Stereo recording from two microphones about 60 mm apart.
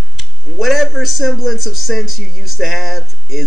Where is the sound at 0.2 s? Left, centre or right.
Centre.